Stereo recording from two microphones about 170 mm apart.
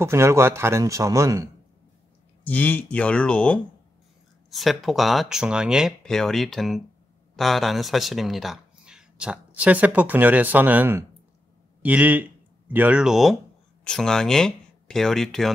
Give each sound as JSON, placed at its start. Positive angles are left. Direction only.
{"t": 0.0, "sound": "speech", "side_deg": -15}
{"t": 2.4, "sound": "speech", "side_deg": 10}